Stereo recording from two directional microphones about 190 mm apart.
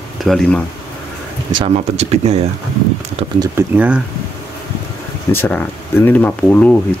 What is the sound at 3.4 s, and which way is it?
Speech, 10° right (ahead or behind).